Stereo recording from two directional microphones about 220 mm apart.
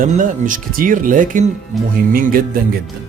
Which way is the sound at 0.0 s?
35° right (ahead or behind).